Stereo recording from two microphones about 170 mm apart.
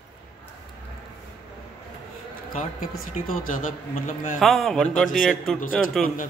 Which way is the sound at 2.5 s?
55° left (ahead or behind).